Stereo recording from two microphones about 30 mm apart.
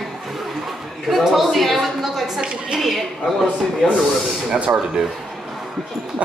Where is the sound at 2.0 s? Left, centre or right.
Centre.